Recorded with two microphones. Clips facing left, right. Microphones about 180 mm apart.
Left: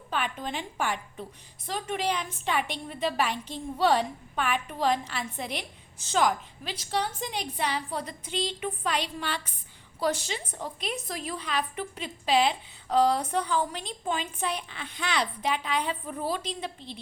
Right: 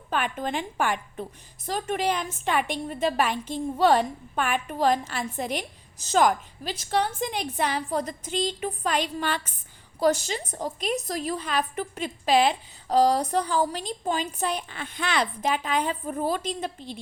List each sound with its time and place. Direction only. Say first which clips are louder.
0.1 s a woman's voice: right 4 dB; 50° right (ahead or behind)
1.6 s a woman's voice: right 3 dB; 45° right (ahead or behind)